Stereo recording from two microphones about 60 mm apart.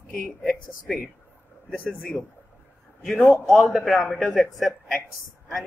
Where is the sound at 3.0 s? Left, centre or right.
Centre.